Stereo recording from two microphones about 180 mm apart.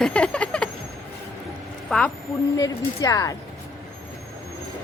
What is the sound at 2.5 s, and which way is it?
Speech, 20° left (ahead or behind).